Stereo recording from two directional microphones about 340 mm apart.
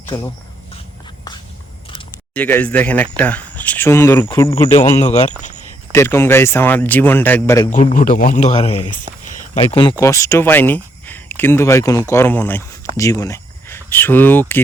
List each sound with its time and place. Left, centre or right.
2.3 s speech: centre
7.7 s a man's voice: left; by 14.6 s centre